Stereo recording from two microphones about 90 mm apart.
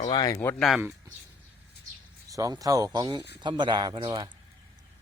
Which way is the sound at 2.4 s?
40° right (ahead or behind).